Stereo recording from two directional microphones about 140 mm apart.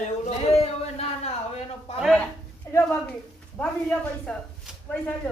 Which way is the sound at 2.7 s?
15° left (ahead or behind).